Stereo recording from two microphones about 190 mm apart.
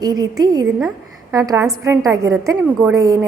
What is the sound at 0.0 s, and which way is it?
A woman's voice, 20° right (ahead or behind).